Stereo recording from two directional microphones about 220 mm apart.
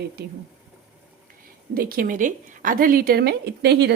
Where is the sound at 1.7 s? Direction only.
40° right (ahead or behind).